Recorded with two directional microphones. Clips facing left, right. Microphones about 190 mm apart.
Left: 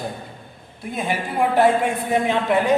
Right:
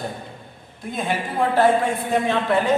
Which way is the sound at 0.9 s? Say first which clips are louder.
Left 1 dB; 10° left (ahead or behind).